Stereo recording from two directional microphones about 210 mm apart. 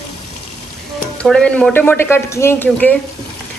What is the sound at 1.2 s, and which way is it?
A man's voice, 5° left (ahead or behind).